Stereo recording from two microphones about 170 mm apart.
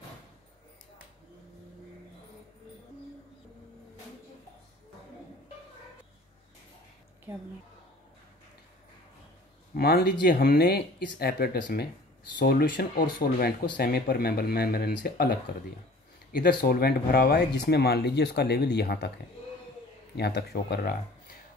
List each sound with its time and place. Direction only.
9.8 s speech: 70° left (ahead or behind)
20.2 s speech: 75° left (ahead or behind)